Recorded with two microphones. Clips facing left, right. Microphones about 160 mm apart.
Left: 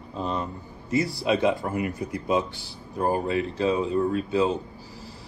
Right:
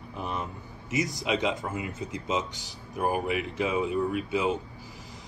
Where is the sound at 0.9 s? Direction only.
20° right (ahead or behind).